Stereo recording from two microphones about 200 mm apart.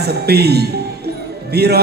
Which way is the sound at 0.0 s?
55° right (ahead or behind).